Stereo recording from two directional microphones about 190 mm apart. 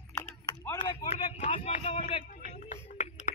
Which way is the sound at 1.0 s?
35° left (ahead or behind).